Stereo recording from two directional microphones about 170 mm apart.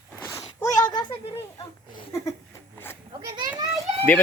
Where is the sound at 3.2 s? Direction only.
20° right (ahead or behind).